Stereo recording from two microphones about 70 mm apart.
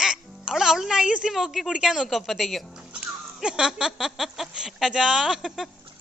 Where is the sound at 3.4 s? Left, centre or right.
Centre.